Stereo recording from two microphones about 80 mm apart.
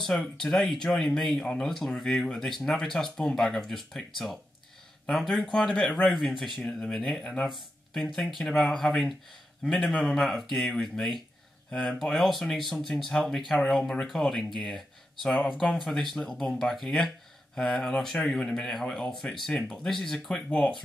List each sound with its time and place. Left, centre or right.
0.2 s speech: centre
5.0 s speech: centre